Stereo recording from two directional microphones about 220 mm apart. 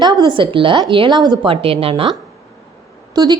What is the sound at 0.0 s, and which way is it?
A woman's voice, 20° right (ahead or behind).